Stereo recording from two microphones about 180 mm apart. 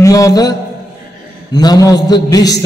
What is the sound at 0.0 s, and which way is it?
A man's voice, 20° left (ahead or behind).